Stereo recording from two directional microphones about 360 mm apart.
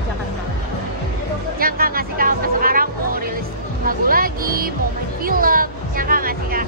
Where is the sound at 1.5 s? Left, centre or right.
Right.